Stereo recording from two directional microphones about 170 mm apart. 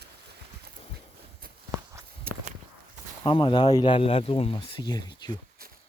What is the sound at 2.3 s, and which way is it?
Walk, 60° right (ahead or behind).